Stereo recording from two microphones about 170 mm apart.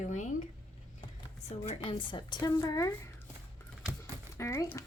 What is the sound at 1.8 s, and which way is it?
A woman's voice, 25° left (ahead or behind).